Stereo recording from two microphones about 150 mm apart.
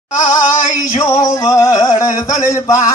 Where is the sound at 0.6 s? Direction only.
20° left (ahead or behind).